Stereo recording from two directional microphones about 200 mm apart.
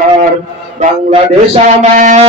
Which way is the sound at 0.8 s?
35° right (ahead or behind).